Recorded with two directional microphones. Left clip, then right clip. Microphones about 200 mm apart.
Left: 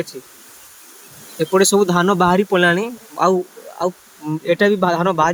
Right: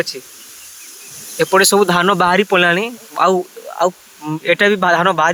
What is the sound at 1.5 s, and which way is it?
Speech, 30° right (ahead or behind).